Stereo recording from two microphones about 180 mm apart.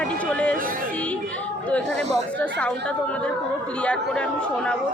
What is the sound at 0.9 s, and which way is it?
Music, 5° left (ahead or behind).